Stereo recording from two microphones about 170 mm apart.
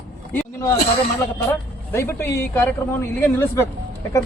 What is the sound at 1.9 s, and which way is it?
A man's voice, 15° left (ahead or behind).